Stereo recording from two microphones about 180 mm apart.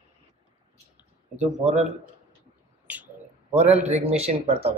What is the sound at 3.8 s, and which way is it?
Speech, 35° right (ahead or behind).